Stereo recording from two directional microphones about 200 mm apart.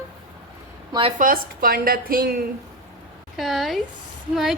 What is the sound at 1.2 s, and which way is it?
A woman's voice, 45° right (ahead or behind).